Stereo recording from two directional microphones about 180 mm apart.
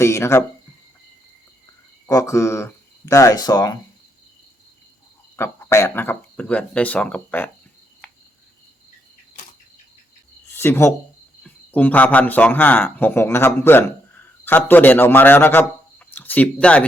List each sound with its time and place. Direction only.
0.0 s speech: 15° left (ahead or behind)
2.0 s speech: 20° left (ahead or behind)
5.4 s speech: 15° left (ahead or behind)
10.5 s a man's voice: 15° left (ahead or behind)